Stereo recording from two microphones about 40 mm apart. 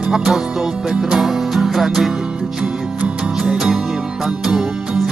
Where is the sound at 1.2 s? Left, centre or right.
Centre.